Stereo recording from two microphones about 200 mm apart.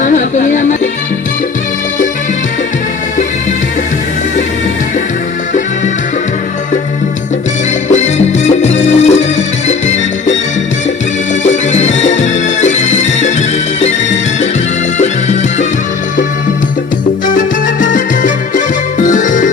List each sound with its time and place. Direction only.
0.0 s music: 40° left (ahead or behind)
7.9 s music: 35° left (ahead or behind)
11.4 s music: 35° left (ahead or behind)
14.9 s music: 35° left (ahead or behind)
17.3 s music: 40° left (ahead or behind)